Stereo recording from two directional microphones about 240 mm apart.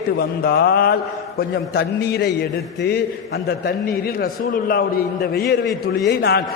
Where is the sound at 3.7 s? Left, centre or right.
Left.